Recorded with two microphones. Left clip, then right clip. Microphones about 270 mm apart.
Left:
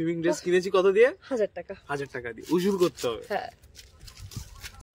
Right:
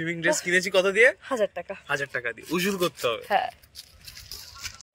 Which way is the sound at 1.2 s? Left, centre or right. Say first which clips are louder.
Right 2 dB; centre.